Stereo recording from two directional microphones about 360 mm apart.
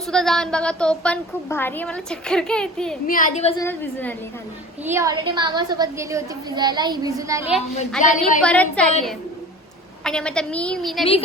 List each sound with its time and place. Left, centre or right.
0.1 s a woman's voice: centre
3.1 s a woman's voice: left
3.6 s a woman's voice: centre
4.9 s a woman's voice: centre
8.0 s a woman's voice: left
8.4 s a woman's voice: centre
10.0 s a woman's voice: centre